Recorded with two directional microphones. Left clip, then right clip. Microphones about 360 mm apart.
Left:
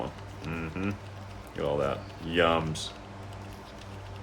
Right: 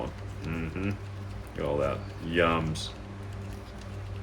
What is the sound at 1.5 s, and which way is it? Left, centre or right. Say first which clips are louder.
Speech: even; centre.